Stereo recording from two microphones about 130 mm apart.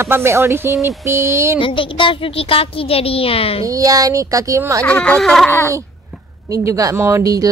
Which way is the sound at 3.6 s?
25° right (ahead or behind).